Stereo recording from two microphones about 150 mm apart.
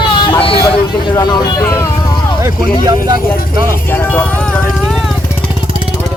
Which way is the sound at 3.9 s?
15° left (ahead or behind).